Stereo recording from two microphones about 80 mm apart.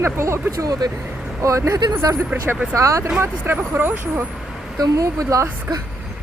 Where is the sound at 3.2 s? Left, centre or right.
Right.